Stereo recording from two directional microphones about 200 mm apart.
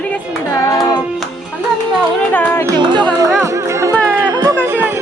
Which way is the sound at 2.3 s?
10° left (ahead or behind).